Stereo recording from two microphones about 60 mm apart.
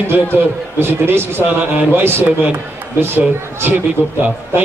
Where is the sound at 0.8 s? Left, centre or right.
Right.